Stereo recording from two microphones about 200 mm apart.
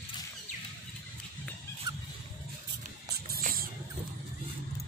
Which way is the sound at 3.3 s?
45° right (ahead or behind).